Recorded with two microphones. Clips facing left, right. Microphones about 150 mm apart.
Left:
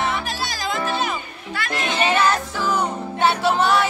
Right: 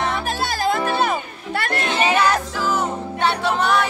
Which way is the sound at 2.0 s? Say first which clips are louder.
Even; 10° right (ahead or behind).